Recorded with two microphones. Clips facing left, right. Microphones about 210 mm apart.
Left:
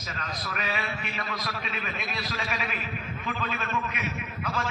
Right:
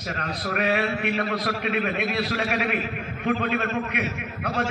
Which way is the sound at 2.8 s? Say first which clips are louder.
Right 6 dB; 50° right (ahead or behind).